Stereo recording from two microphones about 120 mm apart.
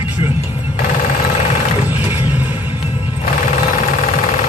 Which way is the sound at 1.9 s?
15° right (ahead or behind).